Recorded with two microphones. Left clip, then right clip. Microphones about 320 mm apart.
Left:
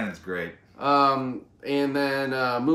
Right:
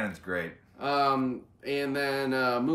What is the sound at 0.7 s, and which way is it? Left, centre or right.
Speech, centre.